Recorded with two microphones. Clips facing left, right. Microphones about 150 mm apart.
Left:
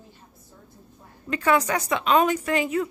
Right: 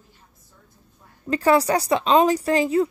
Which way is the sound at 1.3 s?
35° right (ahead or behind).